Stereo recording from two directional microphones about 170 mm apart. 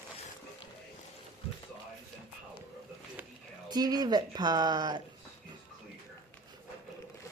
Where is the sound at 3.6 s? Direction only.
25° right (ahead or behind).